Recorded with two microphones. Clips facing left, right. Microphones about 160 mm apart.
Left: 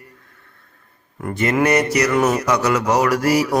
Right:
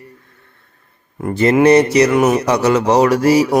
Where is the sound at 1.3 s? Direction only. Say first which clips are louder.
Right 7 dB; 25° right (ahead or behind).